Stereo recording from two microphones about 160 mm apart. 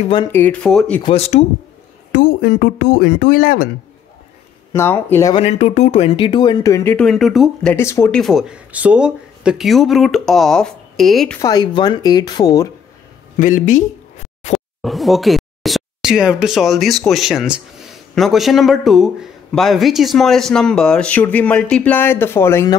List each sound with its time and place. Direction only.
0.3 s speech: 10° left (ahead or behind)
1.0 s speech: 40° left (ahead or behind)
2.1 s speech: 65° left (ahead or behind)
4.7 s speech: 15° left (ahead or behind)
5.3 s speech: 40° left (ahead or behind); by 7.1 s 15° left (ahead or behind)
7.1 s speech: centre (ahead or behind)
7.7 s speech: 15° left (ahead or behind)
8.1 s speech: centre (ahead or behind)
11.4 s speech: 25° left (ahead or behind)
13.4 s speech: 50° left (ahead or behind)
14.8 s speech: centre (ahead or behind); by 22.8 s 15° left (ahead or behind)